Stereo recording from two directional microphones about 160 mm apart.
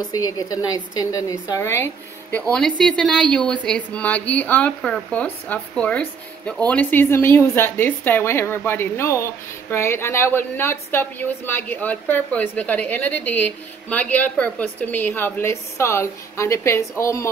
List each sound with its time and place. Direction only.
0.1 s a woman's voice: 20° left (ahead or behind)
2.8 s a woman's voice: 5° left (ahead or behind)